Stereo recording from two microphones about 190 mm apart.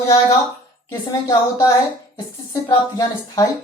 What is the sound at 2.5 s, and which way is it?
Speech, 20° left (ahead or behind).